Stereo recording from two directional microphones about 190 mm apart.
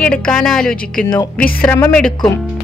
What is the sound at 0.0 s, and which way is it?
A woman's voice, 5° left (ahead or behind).